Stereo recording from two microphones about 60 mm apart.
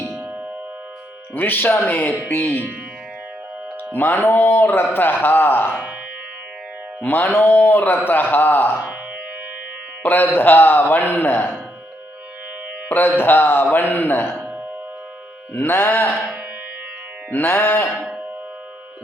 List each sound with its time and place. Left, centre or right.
1.4 s a man's voice: left
3.9 s a man's voice: left
7.0 s a man's voice: left
10.0 s a man's voice: left
12.9 s a man's voice: left
15.5 s a man's voice: left
17.3 s a man's voice: left